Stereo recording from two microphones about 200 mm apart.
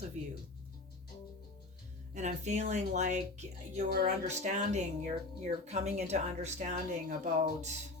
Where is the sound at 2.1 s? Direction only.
35° right (ahead or behind).